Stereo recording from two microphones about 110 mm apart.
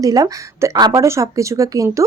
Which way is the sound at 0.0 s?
35° right (ahead or behind).